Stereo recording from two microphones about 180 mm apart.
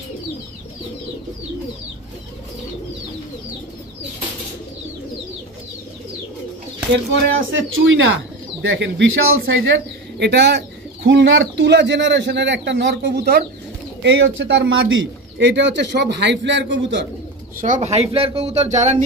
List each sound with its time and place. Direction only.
6.9 s speech: 85° right
10.1 s a man's voice: 70° right (ahead or behind)
11.1 s a man's voice: 90° right; by 13.5 s 60° right (ahead or behind)
14.0 s speech: 90° right
17.6 s speech: 45° right (ahead or behind)